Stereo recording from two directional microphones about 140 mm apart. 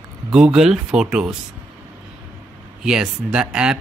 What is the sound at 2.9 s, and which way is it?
Mantra, 5° right (ahead or behind).